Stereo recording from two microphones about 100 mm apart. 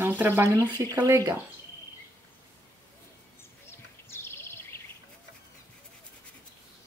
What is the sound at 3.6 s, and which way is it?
Bird, 25° left (ahead or behind).